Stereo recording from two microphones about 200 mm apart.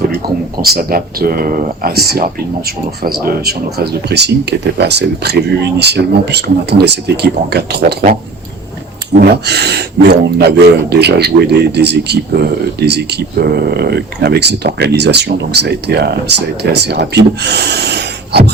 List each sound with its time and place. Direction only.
0.6 s speech: 50° right (ahead or behind)